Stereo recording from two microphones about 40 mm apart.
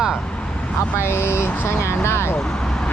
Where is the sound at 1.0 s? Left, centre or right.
Left.